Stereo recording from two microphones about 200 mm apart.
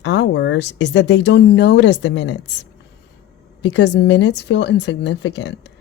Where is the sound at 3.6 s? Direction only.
60° left (ahead or behind).